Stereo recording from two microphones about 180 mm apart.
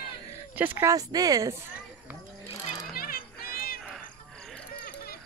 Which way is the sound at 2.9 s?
55° left (ahead or behind).